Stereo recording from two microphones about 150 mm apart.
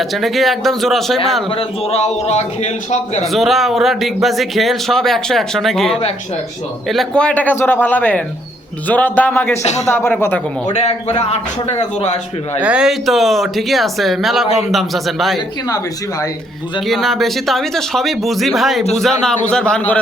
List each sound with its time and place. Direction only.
0.0 s speech: centre (ahead or behind)
1.5 s a man's voice: 40° left (ahead or behind)
3.3 s a man's voice: centre (ahead or behind)
10.7 s a man's voice: 45° left (ahead or behind)
12.5 s speech: 10° right (ahead or behind)
16.8 s speech: centre (ahead or behind)